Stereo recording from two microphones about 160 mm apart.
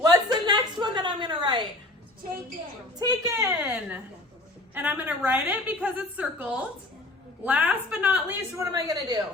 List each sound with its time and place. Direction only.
0.0 s a sound: 25° right (ahead or behind)
3.0 s a woman's voice: 25° right (ahead or behind)
3.6 s a woman's voice: 10° right (ahead or behind)